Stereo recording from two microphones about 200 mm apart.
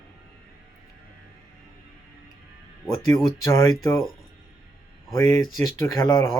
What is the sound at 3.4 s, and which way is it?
Speech, 15° left (ahead or behind).